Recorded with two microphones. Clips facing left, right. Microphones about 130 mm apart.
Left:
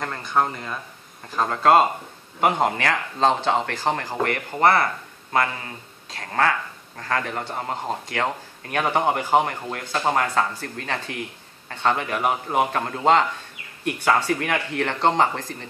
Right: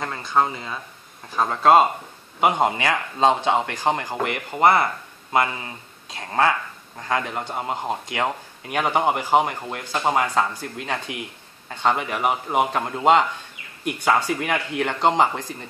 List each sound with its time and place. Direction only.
0.0 s speech: 5° right (ahead or behind)
6.1 s speech: 20° right (ahead or behind)